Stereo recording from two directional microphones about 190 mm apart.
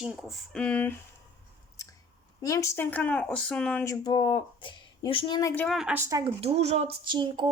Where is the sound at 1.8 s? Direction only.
15° left (ahead or behind).